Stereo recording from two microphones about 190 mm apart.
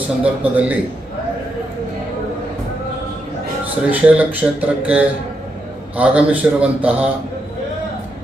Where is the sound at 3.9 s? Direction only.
5° right (ahead or behind).